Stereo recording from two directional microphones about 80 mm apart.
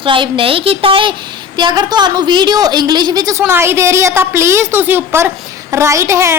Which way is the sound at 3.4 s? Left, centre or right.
Right.